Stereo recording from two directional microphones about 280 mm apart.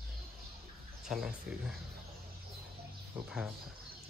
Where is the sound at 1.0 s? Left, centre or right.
Centre.